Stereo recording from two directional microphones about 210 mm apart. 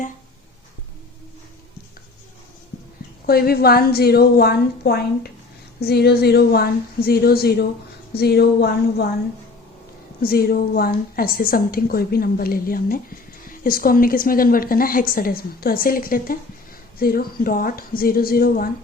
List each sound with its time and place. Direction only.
3.2 s a woman's voice: 45° left (ahead or behind)
10.2 s a woman's voice: 45° left (ahead or behind)